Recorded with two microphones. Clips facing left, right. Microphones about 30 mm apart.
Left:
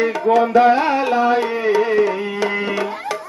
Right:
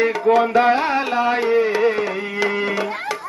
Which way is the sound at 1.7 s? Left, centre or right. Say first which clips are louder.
Left 3 dB; centre.